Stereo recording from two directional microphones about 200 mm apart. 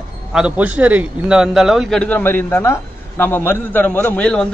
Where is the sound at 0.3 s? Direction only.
5° right (ahead or behind).